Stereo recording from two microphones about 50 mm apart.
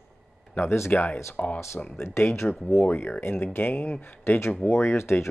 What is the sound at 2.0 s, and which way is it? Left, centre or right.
Speech, left.